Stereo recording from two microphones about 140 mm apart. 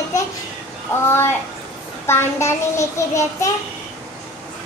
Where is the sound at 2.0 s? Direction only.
20° left (ahead or behind).